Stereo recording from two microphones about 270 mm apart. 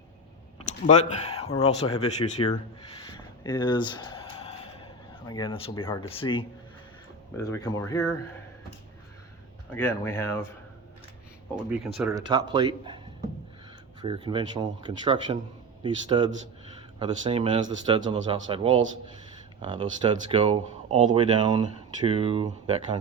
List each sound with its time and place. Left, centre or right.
0.7 s a sound: left
1.2 s speech: left
3.1 s a sound: centre
5.3 s speech: centre
7.4 s speech: centre
9.7 s speech: centre
11.5 s speech: centre
12.1 s speech: centre
14.0 s speech: centre